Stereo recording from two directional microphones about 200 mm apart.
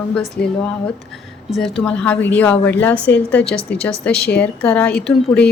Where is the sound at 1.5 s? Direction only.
Centre (ahead or behind).